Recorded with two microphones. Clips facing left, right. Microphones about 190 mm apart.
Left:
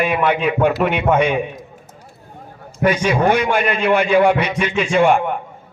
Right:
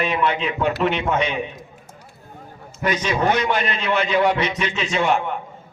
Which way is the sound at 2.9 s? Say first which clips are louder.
Left 5 dB; 10° left (ahead or behind).